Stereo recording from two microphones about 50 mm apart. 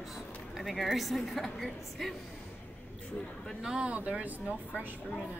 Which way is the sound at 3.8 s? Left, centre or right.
Right.